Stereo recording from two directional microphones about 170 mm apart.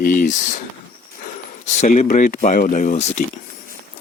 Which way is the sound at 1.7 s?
45° left (ahead or behind).